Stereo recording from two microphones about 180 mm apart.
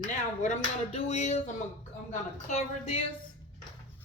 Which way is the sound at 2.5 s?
40° left (ahead or behind).